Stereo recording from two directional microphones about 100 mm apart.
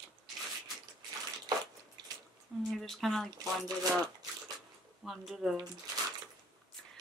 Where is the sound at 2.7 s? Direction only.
Centre (ahead or behind).